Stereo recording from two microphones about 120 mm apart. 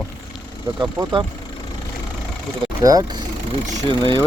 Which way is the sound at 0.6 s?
30° right (ahead or behind).